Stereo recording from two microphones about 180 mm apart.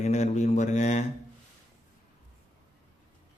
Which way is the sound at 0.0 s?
40° left (ahead or behind).